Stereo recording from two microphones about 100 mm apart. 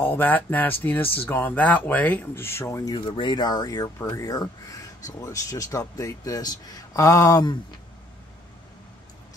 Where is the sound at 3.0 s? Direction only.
55° left (ahead or behind); by 7.4 s 35° left (ahead or behind).